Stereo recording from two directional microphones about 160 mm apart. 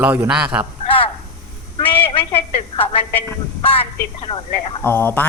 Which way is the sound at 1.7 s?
35° left (ahead or behind).